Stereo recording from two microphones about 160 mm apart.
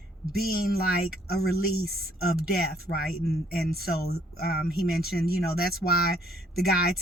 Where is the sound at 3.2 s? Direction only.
75° left (ahead or behind).